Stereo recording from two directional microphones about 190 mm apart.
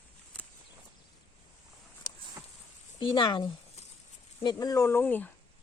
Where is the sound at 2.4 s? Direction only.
15° right (ahead or behind).